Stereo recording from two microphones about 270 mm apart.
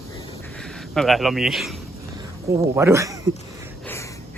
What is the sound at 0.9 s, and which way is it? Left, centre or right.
Speech, centre.